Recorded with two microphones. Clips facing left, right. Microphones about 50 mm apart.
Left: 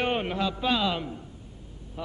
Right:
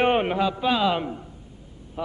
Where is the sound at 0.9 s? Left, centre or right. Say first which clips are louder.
Right 6 dB; centre.